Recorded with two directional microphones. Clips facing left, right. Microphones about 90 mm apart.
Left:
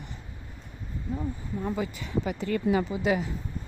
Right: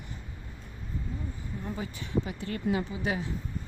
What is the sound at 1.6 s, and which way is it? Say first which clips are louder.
Speech: left 6 dB; 90° left.